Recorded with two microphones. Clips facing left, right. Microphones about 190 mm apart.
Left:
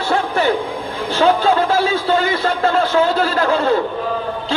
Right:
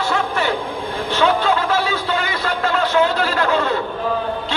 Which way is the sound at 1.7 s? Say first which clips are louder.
Left 4 dB; 30° left (ahead or behind).